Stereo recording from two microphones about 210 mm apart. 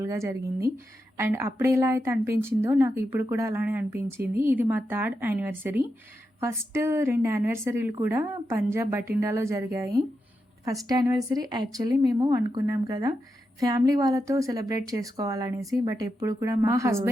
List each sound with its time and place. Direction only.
0.0 s a woman's voice: 15° right (ahead or behind)